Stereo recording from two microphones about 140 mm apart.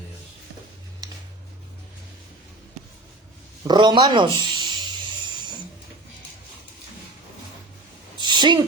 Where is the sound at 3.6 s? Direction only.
30° right (ahead or behind).